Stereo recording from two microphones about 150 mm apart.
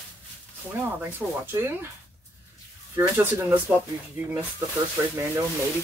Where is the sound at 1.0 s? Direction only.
15° right (ahead or behind).